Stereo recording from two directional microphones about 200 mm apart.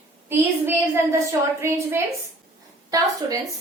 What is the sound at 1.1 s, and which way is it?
Speech, 15° right (ahead or behind).